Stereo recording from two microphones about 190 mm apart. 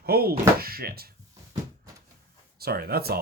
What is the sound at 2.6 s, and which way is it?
Speech, 55° right (ahead or behind).